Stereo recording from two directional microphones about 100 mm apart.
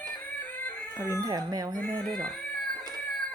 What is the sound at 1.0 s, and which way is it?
Speech, 30° right (ahead or behind).